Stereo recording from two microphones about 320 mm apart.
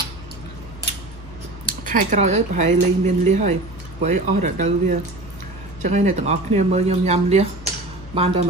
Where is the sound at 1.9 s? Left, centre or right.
Right.